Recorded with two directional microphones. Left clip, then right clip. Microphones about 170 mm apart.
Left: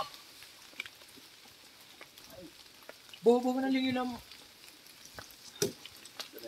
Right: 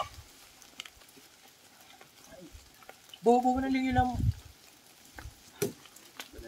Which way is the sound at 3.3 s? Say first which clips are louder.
Right 3 dB; centre (ahead or behind).